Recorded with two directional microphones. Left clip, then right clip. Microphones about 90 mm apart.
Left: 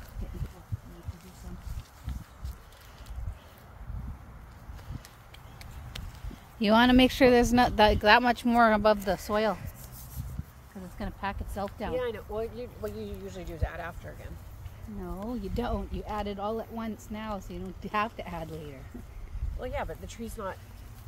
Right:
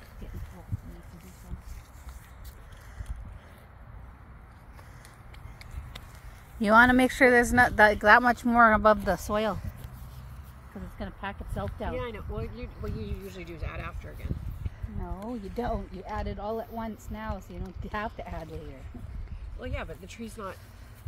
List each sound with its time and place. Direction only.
6.6 s speech: 10° left (ahead or behind); by 8.5 s 35° left (ahead or behind)
8.5 s speech: 45° left (ahead or behind)
8.8 s speech: 5° right (ahead or behind)
11.0 s a sound: 40° left (ahead or behind)
11.9 s speech: 55° left (ahead or behind)
15.2 s speech: 15° left (ahead or behind)
19.6 s speech: 55° left (ahead or behind)